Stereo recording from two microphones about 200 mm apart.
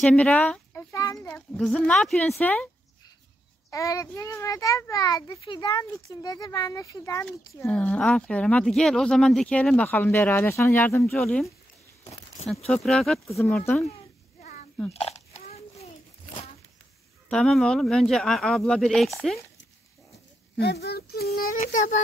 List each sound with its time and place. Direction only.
0.0 s speech: 5° left (ahead or behind)
1.3 s speech: centre (ahead or behind)
3.7 s a child's voice: 15° left (ahead or behind)
7.2 s speech: 5° left (ahead or behind)
12.6 s speech: centre (ahead or behind)
14.4 s a sound: 45° left (ahead or behind)
14.9 s a sound: 30° left (ahead or behind)
17.3 s speech: centre (ahead or behind)
20.5 s speech: 50° left (ahead or behind)